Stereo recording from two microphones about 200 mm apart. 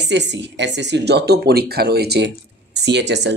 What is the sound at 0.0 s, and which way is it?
Speech, 60° right (ahead or behind).